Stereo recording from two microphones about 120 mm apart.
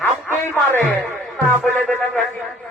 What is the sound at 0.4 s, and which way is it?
Speech, 20° left (ahead or behind).